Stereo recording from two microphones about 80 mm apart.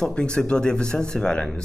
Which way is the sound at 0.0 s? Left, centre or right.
Centre.